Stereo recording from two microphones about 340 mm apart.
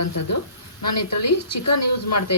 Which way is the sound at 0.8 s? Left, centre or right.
Left.